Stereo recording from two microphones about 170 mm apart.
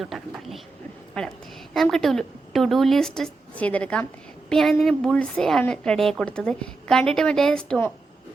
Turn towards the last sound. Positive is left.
turn(degrees=5)  # may be behind; listen again after turning